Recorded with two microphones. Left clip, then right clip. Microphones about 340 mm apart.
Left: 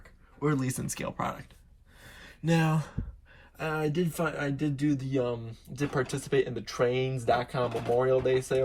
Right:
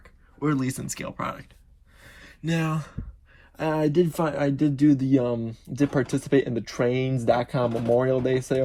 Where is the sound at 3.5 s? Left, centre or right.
Centre.